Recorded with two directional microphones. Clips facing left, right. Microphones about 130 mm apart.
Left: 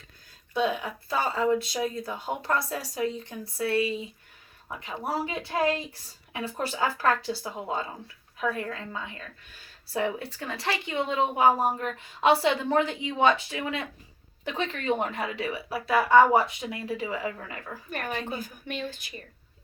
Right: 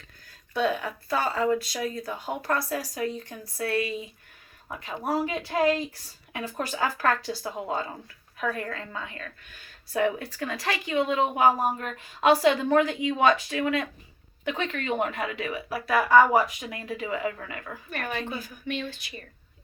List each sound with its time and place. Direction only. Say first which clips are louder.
0.3 s a woman's voice: right 1 dB; 20° left (ahead or behind)
14.4 s a woman's voice: left 1 dB; 35° left (ahead or behind)
17.9 s a woman's voice: even; 40° left (ahead or behind)